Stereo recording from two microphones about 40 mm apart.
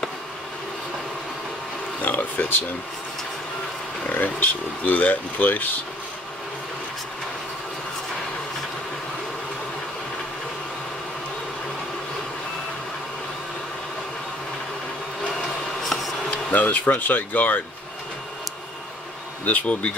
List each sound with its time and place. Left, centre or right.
2.0 s a sound: left
4.1 s speech: left
15.8 s insect: centre
16.5 s speech: left
19.4 s bee: left